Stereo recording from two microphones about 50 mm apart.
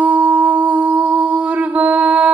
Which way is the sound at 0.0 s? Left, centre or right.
Right.